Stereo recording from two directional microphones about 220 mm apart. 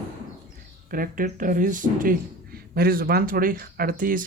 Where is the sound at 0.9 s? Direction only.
40° right (ahead or behind).